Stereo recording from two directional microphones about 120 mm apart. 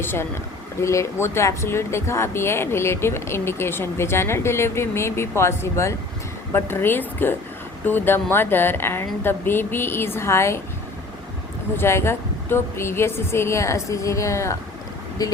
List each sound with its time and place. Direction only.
0.0 s speech: 20° left (ahead or behind)
11.8 s speech: 20° left (ahead or behind)